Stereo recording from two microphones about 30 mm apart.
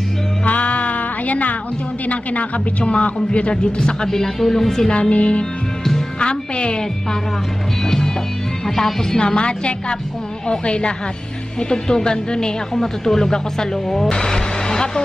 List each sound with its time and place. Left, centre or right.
0.5 s music: left
2.8 s speech: left
3.7 s a woman's voice: left
4.2 s speech: centre
4.8 s a woman's voice: left
5.1 s music: left
6.1 s speech: left
8.6 s speech: centre
9.2 s speech: left
11.7 s a woman's voice: left
12.8 s speech: centre
14.2 s vehicle: left